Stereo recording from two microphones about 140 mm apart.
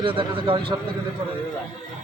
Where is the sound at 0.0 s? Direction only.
40° right (ahead or behind).